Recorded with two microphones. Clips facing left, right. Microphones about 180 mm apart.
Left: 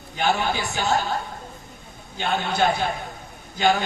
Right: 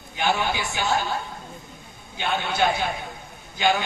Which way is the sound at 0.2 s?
40° left (ahead or behind).